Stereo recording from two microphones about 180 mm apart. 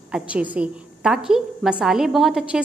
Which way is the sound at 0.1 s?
5° right (ahead or behind).